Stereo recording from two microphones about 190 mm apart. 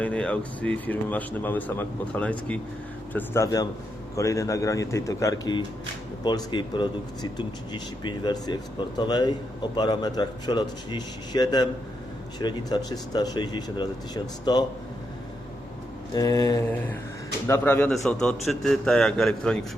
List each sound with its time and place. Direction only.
0.0 s speech: 5° left (ahead or behind); by 14.6 s 20° left (ahead or behind)
16.1 s speech: 20° left (ahead or behind)
17.5 s a man's voice: 10° left (ahead or behind)